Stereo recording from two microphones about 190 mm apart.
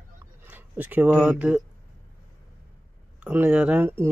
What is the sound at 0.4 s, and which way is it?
Speech, 10° right (ahead or behind).